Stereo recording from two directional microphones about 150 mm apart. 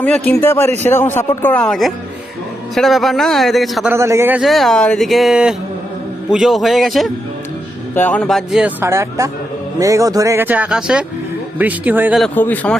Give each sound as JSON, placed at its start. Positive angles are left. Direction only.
{"t": 0.0, "sound": "a man's voice", "side_deg": 10}
{"t": 3.9, "sound": "a man's voice", "side_deg": -20}
{"t": 4.4, "sound": "speech", "side_deg": 0}
{"t": 7.9, "sound": "speech", "side_deg": 10}
{"t": 12.3, "sound": "a man's voice", "side_deg": 10}